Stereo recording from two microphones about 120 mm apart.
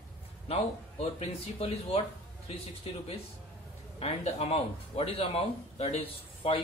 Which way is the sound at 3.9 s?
60° left (ahead or behind).